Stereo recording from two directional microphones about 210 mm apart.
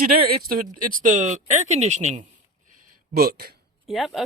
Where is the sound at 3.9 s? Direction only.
Centre (ahead or behind).